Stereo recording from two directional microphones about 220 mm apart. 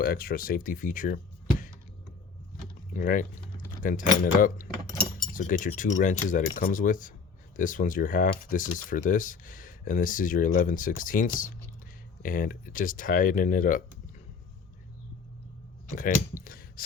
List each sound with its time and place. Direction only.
0.0 s speech: 40° left (ahead or behind)
2.9 s speech: 40° left (ahead or behind)
15.9 s speech: 35° left (ahead or behind)